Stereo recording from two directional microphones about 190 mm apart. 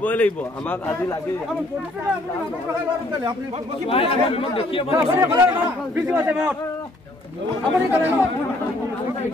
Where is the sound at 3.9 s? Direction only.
30° left (ahead or behind).